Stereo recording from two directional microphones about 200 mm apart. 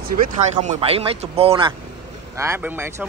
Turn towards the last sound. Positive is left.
turn(degrees=-10)  # may be behind; listen again after turning